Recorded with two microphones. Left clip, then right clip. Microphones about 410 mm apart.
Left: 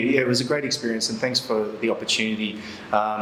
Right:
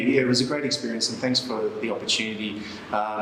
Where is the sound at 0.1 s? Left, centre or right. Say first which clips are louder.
Right 2 dB; left.